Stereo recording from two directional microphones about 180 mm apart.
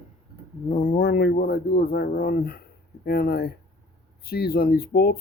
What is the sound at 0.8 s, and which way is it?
Speech, 55° left (ahead or behind).